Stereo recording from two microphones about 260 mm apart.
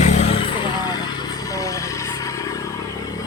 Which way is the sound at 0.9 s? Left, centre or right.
Centre.